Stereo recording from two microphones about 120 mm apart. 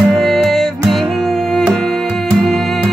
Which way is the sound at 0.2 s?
Centre (ahead or behind).